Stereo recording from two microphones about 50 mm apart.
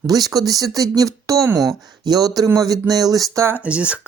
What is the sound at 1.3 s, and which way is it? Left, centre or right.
Speech, right.